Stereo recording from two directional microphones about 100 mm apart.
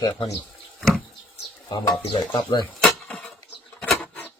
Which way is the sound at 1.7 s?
55° left (ahead or behind).